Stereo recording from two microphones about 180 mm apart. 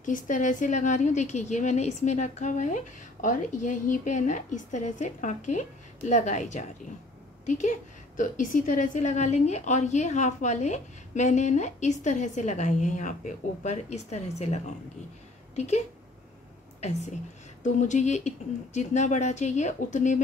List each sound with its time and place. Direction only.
0.0 s a woman's voice: 45° left (ahead or behind)
17.7 s a woman's voice: 40° left (ahead or behind)